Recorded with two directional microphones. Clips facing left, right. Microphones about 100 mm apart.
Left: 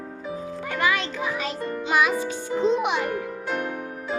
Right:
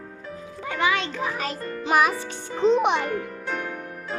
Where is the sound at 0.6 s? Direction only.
20° right (ahead or behind); by 2.1 s 40° right (ahead or behind).